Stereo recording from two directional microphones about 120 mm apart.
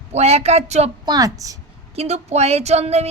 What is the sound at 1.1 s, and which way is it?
Speech, 30° right (ahead or behind).